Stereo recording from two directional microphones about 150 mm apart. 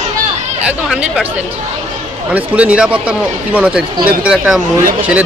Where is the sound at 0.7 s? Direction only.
5° right (ahead or behind).